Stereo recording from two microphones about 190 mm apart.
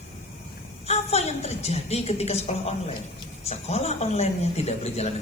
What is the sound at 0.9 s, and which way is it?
A woman's voice, 35° left (ahead or behind).